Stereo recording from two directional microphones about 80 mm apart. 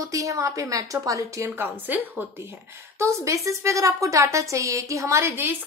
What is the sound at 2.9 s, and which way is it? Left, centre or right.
A woman's voice, right.